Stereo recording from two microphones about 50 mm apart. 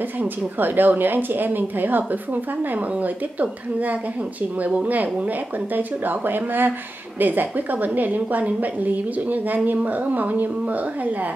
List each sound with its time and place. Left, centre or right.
0.2 s a woman's voice: right